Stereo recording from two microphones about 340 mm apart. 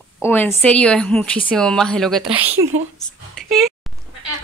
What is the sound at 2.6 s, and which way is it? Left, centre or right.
Speech, centre.